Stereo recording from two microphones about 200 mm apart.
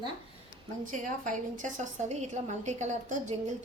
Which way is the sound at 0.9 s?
40° right (ahead or behind).